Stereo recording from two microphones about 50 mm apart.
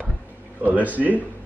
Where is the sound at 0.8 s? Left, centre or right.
Right.